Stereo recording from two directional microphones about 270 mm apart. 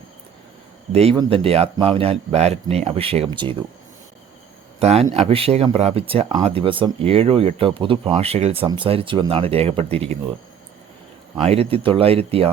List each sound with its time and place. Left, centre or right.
0.9 s speech: centre
4.8 s speech: right
11.4 s speech: right